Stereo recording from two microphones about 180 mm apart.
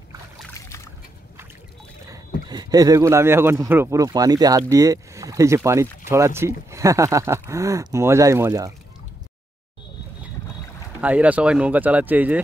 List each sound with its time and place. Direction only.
2.0 s speech: 20° right (ahead or behind)
11.0 s speech: 10° right (ahead or behind)